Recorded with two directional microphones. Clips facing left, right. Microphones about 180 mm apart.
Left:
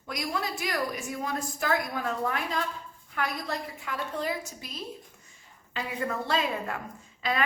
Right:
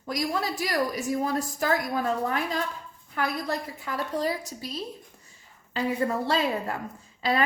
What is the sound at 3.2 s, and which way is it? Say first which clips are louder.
A woman's voice: right 3 dB; 40° right (ahead or behind).